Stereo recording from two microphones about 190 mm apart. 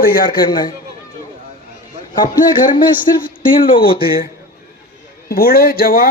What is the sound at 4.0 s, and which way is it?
Speech, 50° left (ahead or behind).